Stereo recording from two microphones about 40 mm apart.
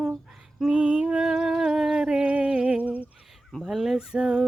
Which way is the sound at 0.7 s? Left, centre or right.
Right.